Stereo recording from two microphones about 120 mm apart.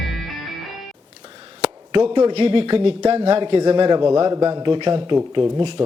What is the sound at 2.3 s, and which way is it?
Speech, 50° right (ahead or behind).